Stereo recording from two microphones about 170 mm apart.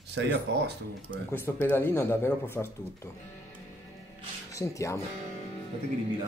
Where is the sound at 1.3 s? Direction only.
15° left (ahead or behind).